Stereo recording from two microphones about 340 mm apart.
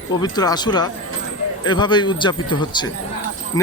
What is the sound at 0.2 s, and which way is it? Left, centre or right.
A man's voice, centre.